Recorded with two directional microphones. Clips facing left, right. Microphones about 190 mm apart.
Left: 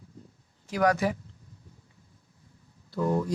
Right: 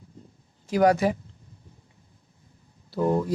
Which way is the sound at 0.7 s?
30° right (ahead or behind).